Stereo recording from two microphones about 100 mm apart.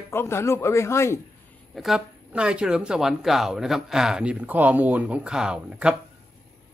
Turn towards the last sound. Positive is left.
turn(degrees=-10)  # may be behind; listen again after turning